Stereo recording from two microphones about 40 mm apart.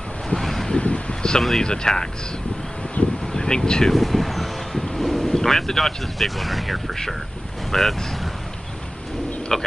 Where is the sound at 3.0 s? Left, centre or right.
Left.